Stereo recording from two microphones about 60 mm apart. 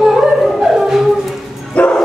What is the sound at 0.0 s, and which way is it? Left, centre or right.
Music, centre.